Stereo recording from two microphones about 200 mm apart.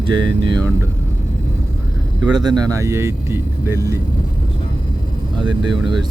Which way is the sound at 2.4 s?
20° right (ahead or behind).